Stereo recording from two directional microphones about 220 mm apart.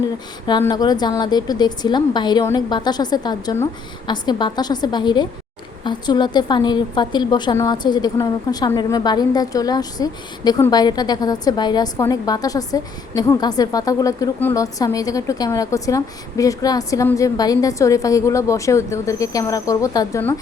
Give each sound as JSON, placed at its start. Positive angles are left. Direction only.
{"t": 0.4, "sound": "a woman's voice", "side_deg": 20}